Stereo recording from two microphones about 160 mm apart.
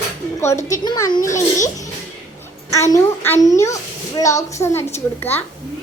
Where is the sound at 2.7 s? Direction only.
20° left (ahead or behind).